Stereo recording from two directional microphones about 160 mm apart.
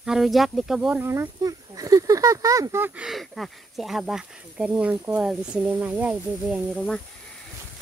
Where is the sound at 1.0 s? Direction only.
20° right (ahead or behind).